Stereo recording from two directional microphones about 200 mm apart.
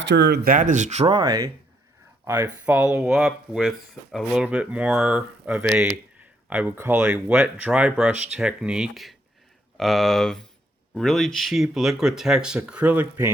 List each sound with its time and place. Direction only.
0.1 s speech: 55° right (ahead or behind); by 13.3 s 10° right (ahead or behind)